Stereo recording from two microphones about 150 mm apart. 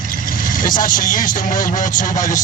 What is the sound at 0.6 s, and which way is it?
Speech, 65° left (ahead or behind).